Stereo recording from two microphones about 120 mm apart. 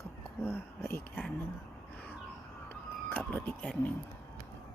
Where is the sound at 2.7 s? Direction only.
15° left (ahead or behind).